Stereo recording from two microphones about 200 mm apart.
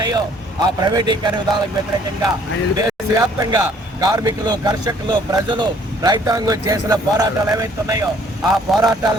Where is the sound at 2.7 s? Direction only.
20° right (ahead or behind).